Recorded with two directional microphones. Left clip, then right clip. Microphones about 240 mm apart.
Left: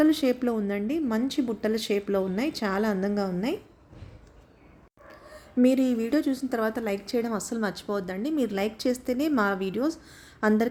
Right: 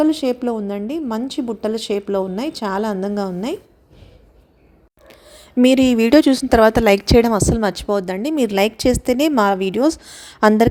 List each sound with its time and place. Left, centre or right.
0.0 s a woman's voice: centre
5.0 s speech: right